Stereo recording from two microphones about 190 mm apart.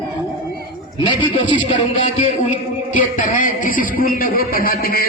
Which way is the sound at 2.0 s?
40° left (ahead or behind).